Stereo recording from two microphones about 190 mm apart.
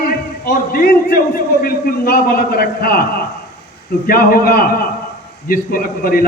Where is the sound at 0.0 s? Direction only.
50° left (ahead or behind).